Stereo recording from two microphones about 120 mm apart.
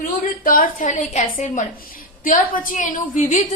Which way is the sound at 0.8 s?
90° left.